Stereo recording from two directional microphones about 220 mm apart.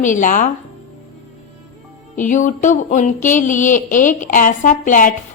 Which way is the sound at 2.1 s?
35° left (ahead or behind).